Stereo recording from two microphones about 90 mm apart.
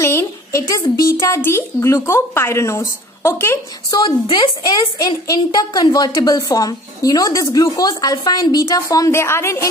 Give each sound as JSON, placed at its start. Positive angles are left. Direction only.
{"t": 0.0, "sound": "a woman's voice", "side_deg": 30}
{"t": 3.9, "sound": "a woman's voice", "side_deg": 50}